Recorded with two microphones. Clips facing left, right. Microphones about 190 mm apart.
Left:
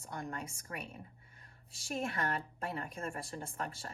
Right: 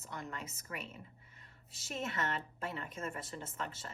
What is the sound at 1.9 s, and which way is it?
A woman's voice, 30° left (ahead or behind).